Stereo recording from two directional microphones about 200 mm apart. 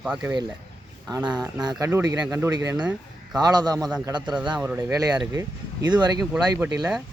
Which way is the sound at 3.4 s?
20° right (ahead or behind).